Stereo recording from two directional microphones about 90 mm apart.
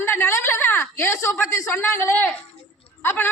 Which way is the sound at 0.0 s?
30° left (ahead or behind).